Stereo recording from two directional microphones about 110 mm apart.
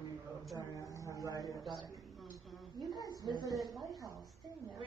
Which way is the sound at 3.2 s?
40° right (ahead or behind).